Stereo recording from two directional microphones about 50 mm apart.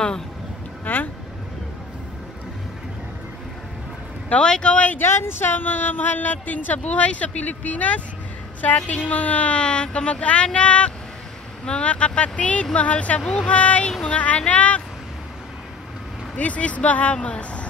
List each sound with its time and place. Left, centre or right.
0.9 s speech: left
4.4 s speech: centre
5.0 s speech: left
13.2 s speech: centre
13.5 s speech: left
16.3 s speech: left